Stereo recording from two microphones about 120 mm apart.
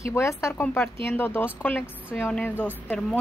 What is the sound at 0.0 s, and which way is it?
A woman's voice, 25° left (ahead or behind).